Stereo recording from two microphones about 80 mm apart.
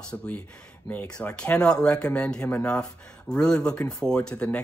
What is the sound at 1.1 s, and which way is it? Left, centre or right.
Speech, centre.